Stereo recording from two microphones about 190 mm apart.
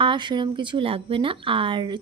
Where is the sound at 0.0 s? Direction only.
25° right (ahead or behind).